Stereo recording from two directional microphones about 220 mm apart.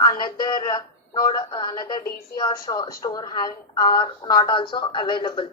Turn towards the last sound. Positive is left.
turn(degrees=20)  # may be behind; listen again after turning